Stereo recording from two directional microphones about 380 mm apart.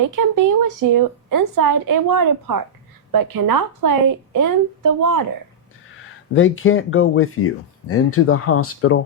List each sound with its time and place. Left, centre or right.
0.2 s a woman's voice: right
6.3 s speech: left